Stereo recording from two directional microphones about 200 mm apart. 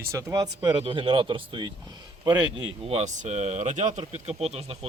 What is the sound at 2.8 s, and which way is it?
Speech, 35° right (ahead or behind).